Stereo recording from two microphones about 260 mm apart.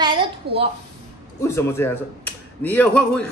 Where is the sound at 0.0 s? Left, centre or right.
Centre.